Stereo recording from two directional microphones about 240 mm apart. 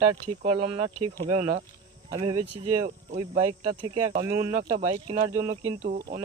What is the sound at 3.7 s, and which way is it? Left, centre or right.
Speech, right.